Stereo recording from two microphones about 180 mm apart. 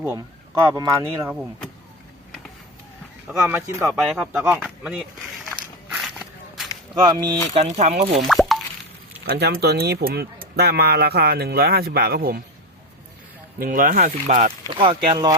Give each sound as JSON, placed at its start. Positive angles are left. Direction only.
{"t": 0.0, "sound": "speech", "side_deg": -15}
{"t": 3.2, "sound": "speech", "side_deg": -10}
{"t": 3.9, "sound": "speech", "side_deg": -5}
{"t": 6.1, "sound": "walk", "side_deg": 0}
{"t": 7.0, "sound": "speech", "side_deg": -25}
{"t": 7.6, "sound": "speech", "side_deg": -40}
{"t": 8.3, "sound": "plop", "side_deg": 0}
{"t": 9.2, "sound": "speech", "side_deg": -60}
{"t": 13.6, "sound": "speech", "side_deg": -50}
{"t": 14.7, "sound": "speech", "side_deg": -30}